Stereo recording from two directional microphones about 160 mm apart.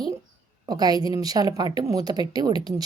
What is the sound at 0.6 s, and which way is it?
A woman's voice, 25° right (ahead or behind).